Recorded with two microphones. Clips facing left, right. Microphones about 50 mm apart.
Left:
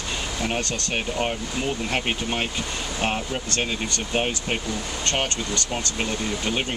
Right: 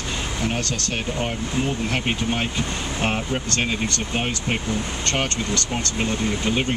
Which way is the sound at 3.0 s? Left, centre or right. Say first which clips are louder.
Right 2 dB; right.